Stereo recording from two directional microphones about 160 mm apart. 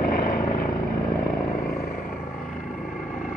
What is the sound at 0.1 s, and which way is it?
Vehicle, 65° left (ahead or behind).